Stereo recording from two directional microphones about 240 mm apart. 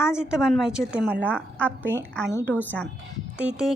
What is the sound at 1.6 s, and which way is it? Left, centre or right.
Speech, centre.